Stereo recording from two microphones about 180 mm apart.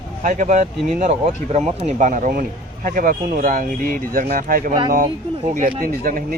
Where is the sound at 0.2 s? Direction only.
45° right (ahead or behind).